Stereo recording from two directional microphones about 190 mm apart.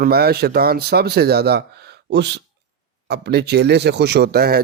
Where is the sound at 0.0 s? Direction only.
55° right (ahead or behind).